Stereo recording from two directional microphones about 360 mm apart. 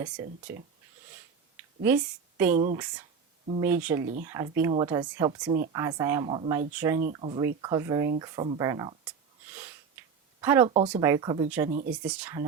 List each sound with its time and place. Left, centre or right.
0.5 s speech: centre
2.6 s speech: centre
3.6 s speech: centre